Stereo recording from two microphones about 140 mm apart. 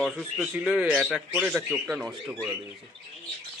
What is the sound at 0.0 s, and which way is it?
A man's voice, 5° left (ahead or behind).